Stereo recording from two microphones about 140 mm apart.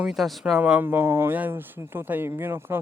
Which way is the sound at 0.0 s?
Centre (ahead or behind).